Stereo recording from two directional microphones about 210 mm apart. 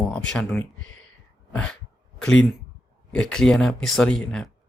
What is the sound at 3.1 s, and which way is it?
Speech, 5° left (ahead or behind).